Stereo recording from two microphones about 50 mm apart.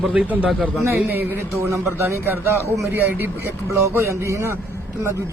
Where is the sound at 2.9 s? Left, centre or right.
Right.